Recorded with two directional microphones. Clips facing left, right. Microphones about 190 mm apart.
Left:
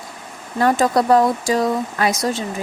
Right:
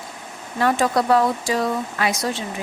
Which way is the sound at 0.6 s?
40° left (ahead or behind).